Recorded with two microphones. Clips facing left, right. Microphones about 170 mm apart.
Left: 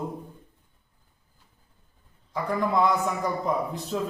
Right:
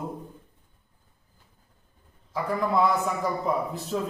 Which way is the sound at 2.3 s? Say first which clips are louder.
Even; centre (ahead or behind).